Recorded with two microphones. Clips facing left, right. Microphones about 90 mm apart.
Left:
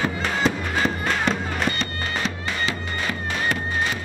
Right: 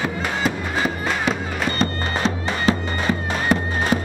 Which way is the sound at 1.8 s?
40° right (ahead or behind).